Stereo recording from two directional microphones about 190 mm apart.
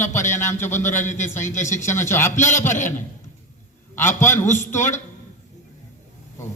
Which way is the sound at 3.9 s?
10° left (ahead or behind).